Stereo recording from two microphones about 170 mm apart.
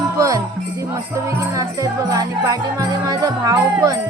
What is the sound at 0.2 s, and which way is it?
Music, 20° right (ahead or behind).